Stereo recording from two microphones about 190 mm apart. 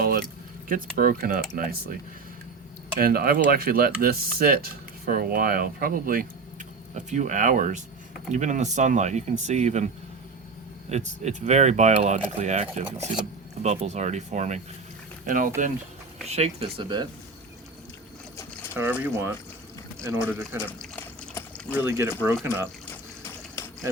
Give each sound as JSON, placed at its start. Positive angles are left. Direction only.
{"t": 0.0, "sound": "keys jangling", "side_deg": -50}
{"t": 0.7, "sound": "speech", "side_deg": -45}
{"t": 3.0, "sound": "speech", "side_deg": -50}
{"t": 10.9, "sound": "speech", "side_deg": -40}
{"t": 18.8, "sound": "speech", "side_deg": -10}
{"t": 20.9, "sound": "liquid", "side_deg": 10}
{"t": 21.8, "sound": "speech", "side_deg": -10}